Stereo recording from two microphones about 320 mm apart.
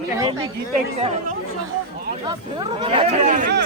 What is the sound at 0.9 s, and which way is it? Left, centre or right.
Speech, right.